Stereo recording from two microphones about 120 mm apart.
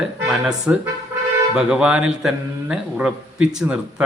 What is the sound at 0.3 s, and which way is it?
A man's voice, 5° right (ahead or behind).